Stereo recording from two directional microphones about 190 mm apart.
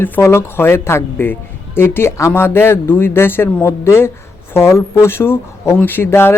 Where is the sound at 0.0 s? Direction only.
10° left (ahead or behind).